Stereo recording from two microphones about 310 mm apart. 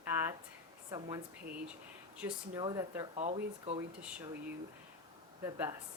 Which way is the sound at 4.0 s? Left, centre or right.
Centre.